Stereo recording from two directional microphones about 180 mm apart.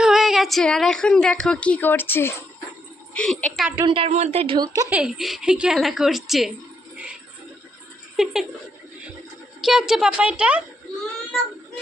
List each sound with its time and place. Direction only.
0.0 s a woman's voice: centre (ahead or behind)
3.8 s a woman's voice: 30° right (ahead or behind)
4.9 s a woman's voice: 5° right (ahead or behind)
8.1 s speech: centre (ahead or behind)
9.6 s a woman's voice: 5° right (ahead or behind)